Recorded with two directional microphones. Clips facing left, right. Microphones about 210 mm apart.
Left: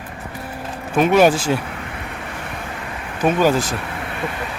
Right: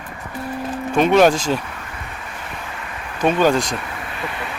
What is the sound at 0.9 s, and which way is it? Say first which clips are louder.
Speech: even; 5° left (ahead or behind).